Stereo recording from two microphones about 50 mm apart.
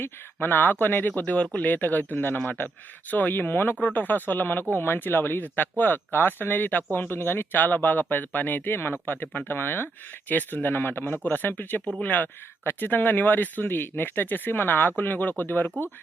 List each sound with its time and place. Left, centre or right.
0.3 s speech: left
3.8 s speech: left
7.1 s speech: left